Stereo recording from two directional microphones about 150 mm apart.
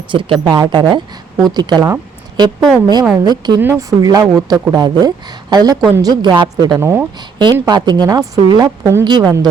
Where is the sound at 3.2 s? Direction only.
30° right (ahead or behind).